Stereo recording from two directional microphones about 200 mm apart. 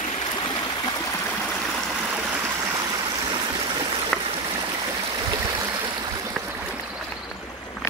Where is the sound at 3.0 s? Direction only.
25° right (ahead or behind).